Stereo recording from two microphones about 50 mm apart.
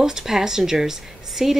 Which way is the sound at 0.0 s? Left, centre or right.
Centre.